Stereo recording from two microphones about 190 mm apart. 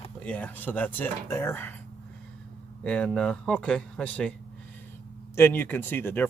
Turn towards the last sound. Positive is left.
turn(degrees=10)  # may be behind; listen again after turning